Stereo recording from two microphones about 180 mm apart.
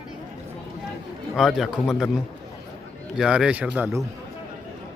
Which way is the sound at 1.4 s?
Centre (ahead or behind).